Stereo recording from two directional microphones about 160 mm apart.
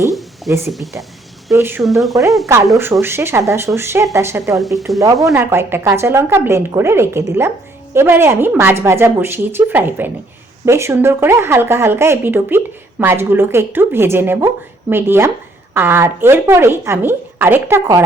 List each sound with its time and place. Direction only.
0.1 s a sound: centre (ahead or behind)
1.5 s a woman's voice: 15° right (ahead or behind)
1.8 s speech: centre (ahead or behind)
3.0 s a woman's voice: 15° right (ahead or behind)